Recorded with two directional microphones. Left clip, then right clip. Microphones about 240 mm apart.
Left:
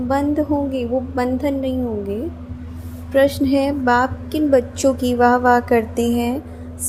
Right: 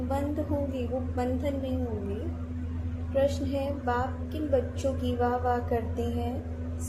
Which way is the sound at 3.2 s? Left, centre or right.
Left.